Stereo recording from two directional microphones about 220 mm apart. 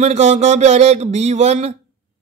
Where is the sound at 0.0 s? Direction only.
30° right (ahead or behind).